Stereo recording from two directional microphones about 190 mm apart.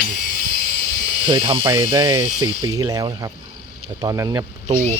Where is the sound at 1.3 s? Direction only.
25° right (ahead or behind).